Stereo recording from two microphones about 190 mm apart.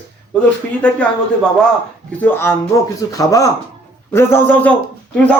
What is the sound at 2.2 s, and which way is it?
A man's voice, 10° left (ahead or behind).